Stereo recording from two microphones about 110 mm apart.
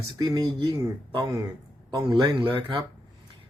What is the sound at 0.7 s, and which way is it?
Speech, 30° right (ahead or behind).